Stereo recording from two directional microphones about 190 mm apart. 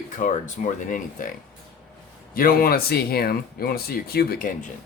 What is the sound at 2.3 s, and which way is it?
Speech, 50° left (ahead or behind).